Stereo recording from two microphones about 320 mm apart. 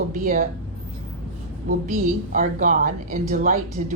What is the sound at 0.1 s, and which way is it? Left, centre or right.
Speech, right.